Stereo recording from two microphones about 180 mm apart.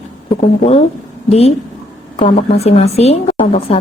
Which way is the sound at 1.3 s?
35° left (ahead or behind).